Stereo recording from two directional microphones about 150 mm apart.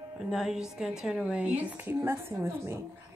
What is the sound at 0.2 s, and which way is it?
A woman's voice, centre (ahead or behind).